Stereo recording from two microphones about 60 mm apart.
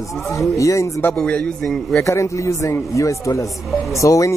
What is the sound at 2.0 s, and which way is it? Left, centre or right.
Speech, left.